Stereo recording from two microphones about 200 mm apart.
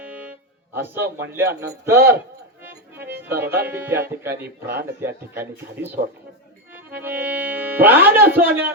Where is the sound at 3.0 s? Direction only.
55° right (ahead or behind).